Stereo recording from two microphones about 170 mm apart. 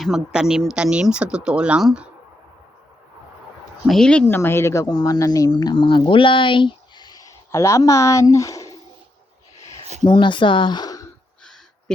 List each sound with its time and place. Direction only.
0.0 s speech: 5° right (ahead or behind)
3.8 s speech: 5° left (ahead or behind); by 8.7 s 20° left (ahead or behind)
10.0 s speech: 30° left (ahead or behind)
11.9 s a sound: 5° left (ahead or behind)